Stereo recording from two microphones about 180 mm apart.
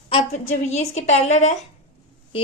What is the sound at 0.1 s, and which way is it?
A woman's voice, 40° left (ahead or behind).